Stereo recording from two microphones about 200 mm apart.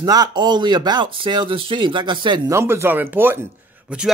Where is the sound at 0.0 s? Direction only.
20° right (ahead or behind).